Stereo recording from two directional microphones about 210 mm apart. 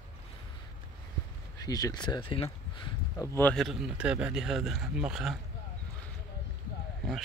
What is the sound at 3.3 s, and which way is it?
Speech, 5° left (ahead or behind).